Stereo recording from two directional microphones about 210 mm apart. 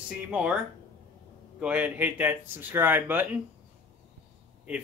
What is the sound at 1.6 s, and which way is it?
Speech, 5° right (ahead or behind).